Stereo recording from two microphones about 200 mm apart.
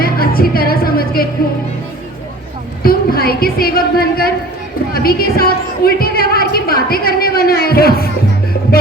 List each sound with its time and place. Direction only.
0.0 s music: 50° left (ahead or behind)
2.8 s a woman's voice: 50° left (ahead or behind)